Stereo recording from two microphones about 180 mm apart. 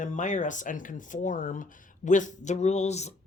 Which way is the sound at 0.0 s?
45° left (ahead or behind).